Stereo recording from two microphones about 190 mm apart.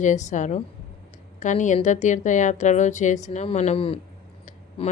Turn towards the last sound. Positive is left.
turn(degrees=30)  # may be behind; listen again after turning